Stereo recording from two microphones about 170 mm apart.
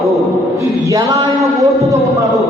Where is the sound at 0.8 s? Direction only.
20° right (ahead or behind).